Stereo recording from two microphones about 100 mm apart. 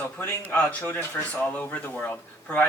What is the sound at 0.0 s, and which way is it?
Speech, 20° left (ahead or behind).